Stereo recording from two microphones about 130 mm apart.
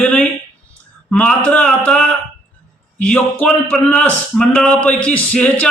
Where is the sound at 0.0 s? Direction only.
10° left (ahead or behind).